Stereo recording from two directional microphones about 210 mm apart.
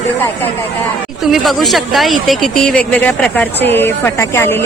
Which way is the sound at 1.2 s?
Centre (ahead or behind).